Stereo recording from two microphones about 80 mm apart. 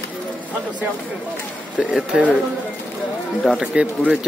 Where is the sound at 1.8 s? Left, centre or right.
Centre.